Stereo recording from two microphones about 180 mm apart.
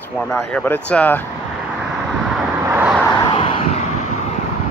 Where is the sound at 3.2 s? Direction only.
30° left (ahead or behind).